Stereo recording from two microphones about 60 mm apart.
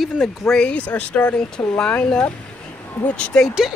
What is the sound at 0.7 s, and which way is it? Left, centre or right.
Speech, left.